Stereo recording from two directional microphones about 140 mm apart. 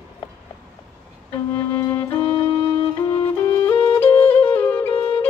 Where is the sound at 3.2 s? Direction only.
20° left (ahead or behind).